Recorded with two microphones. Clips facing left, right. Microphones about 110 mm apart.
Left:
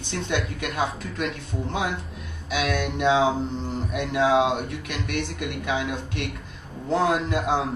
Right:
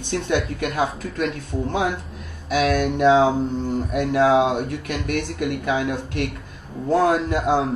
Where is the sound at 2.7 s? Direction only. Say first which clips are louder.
Right 5 dB; 50° right (ahead or behind).